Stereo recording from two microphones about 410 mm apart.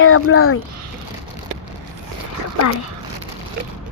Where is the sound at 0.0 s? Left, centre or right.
Left.